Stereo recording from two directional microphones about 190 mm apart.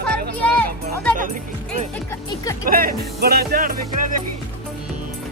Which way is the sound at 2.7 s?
50° right (ahead or behind).